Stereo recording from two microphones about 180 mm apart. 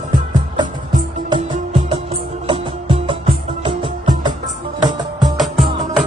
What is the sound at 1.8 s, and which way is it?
Music, 30° right (ahead or behind).